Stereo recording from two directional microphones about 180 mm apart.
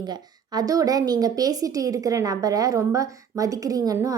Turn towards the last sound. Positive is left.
turn(degrees=-20)  # may be behind; listen again after turning